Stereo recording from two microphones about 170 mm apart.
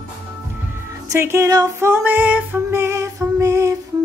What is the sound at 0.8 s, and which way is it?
Music, 15° right (ahead or behind).